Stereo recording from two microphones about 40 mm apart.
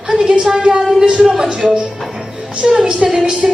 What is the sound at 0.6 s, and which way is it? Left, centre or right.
Speech, right.